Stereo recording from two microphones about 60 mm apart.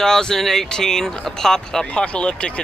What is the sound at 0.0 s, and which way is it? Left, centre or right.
Speech, centre.